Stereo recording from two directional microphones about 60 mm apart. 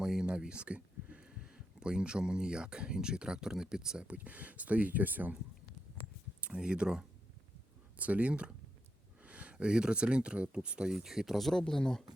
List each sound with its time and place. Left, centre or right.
0.0 s speech: centre; by 5.3 s right
6.4 s speech: centre
7.9 s speech: right
10.9 s speech: centre